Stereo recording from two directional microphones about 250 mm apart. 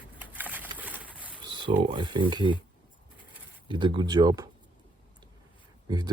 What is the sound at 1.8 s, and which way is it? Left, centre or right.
Speech, centre.